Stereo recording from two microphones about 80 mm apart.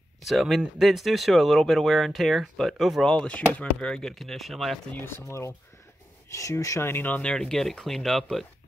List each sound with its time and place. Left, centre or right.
0.2 s speech: centre
5.0 s speech: left
6.8 s speech: left
7.2 s speech: centre